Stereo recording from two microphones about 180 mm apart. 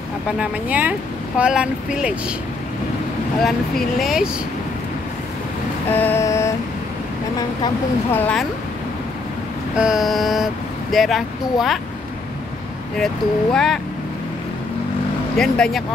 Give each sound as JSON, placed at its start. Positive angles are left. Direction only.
{"t": 0.4, "sound": "speech", "side_deg": -10}
{"t": 3.4, "sound": "speech", "side_deg": 0}
{"t": 5.9, "sound": "vehicle", "side_deg": 10}
{"t": 7.3, "sound": "speech", "side_deg": 15}
{"t": 9.8, "sound": "speech", "side_deg": -5}
{"t": 13.0, "sound": "speech", "side_deg": 0}
{"t": 15.3, "sound": "speech", "side_deg": 5}